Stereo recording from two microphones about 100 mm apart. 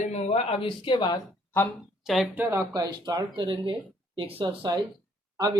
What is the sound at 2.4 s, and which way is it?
Speech, 25° right (ahead or behind).